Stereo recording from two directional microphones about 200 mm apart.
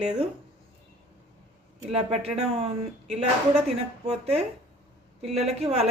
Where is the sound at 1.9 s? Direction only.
30° right (ahead or behind).